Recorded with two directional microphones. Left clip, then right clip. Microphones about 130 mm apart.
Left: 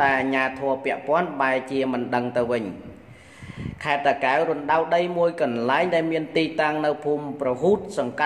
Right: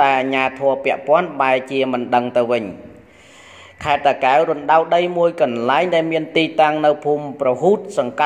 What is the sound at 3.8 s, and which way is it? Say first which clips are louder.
A man's voice: right 6 dB; 25° right (ahead or behind).